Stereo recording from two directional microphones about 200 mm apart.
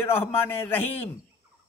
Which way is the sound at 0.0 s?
10° left (ahead or behind).